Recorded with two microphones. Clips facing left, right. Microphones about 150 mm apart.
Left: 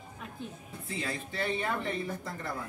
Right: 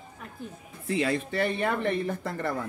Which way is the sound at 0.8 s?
70° right (ahead or behind).